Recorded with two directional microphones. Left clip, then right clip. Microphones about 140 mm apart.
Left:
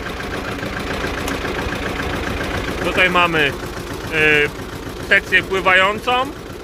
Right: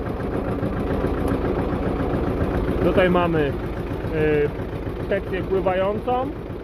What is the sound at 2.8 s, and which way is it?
Speech, 30° right (ahead or behind).